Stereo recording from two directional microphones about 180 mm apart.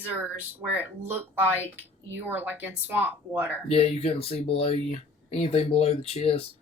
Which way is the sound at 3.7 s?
35° left (ahead or behind).